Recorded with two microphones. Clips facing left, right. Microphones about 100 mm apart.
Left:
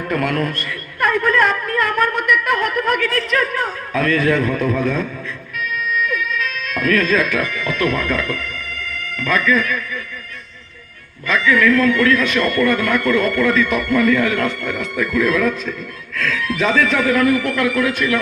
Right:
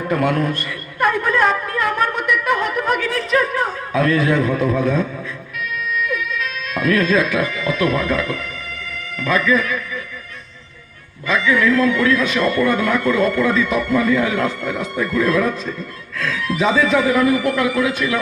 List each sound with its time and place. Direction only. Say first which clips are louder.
0.0 s a sound: right 1 dB; 20° right (ahead or behind)
6.1 s cat: left 1 dB; 15° right (ahead or behind)
7.5 s speech: right 1 dB; 20° right (ahead or behind)
8.7 s music: left 2 dB; 60° left (ahead or behind)
9.1 s speech: even; 15° right (ahead or behind)
11.3 s speech: left 1 dB; 15° right (ahead or behind)
14.9 s speech: even; 30° right (ahead or behind)
16.5 s speech: right 2 dB; 10° right (ahead or behind)